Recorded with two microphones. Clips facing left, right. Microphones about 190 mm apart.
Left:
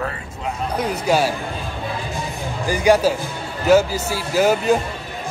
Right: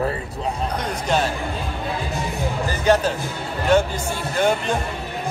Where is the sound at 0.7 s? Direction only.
10° left (ahead or behind).